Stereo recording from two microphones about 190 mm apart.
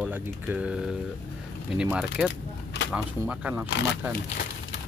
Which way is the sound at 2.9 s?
5° right (ahead or behind).